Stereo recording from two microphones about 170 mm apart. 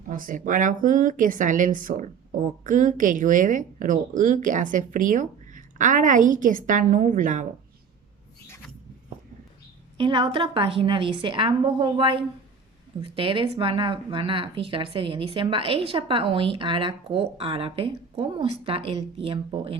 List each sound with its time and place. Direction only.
0.1 s speech: 50° right (ahead or behind)
10.0 s speech: 30° right (ahead or behind)